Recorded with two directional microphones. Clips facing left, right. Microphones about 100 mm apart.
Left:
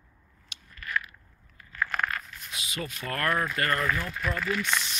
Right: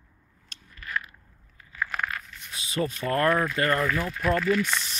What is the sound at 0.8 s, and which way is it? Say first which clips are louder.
Biting: left 1 dB; 30° right (ahead or behind).